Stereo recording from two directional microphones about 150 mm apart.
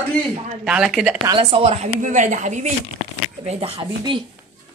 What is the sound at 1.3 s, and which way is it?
Speech, 40° right (ahead or behind).